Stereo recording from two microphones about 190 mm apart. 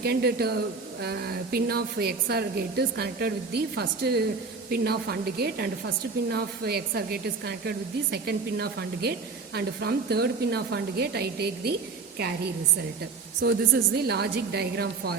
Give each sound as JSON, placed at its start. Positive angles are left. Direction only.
{"t": 0.0, "sound": "a woman's voice", "side_deg": -55}
{"t": 13.4, "sound": "a woman's voice", "side_deg": -60}